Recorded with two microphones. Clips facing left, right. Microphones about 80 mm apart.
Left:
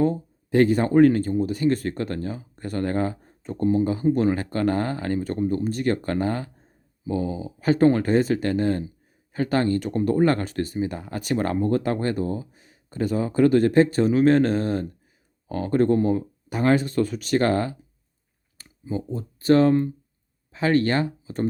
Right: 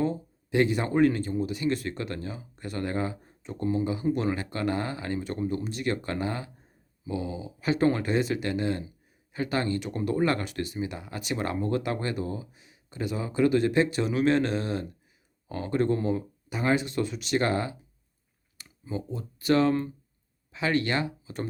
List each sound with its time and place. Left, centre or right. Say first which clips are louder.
0.0 s speech: left 6 dB; left
18.5 s speech: left 5 dB; left